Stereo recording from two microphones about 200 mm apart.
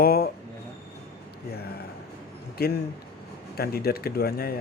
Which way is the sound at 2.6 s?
55° left (ahead or behind).